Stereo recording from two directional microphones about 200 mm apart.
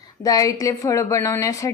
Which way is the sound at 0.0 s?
15° left (ahead or behind).